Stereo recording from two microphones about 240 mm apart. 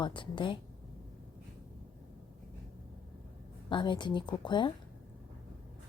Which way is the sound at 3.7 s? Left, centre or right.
Centre.